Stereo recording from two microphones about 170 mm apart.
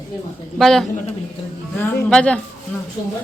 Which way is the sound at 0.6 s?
Centre (ahead or behind).